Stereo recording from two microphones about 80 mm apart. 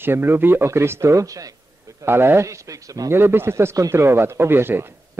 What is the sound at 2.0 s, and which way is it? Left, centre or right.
Speech, right.